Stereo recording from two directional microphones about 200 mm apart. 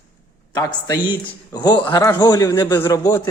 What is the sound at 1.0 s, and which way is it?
A man's voice, 25° left (ahead or behind).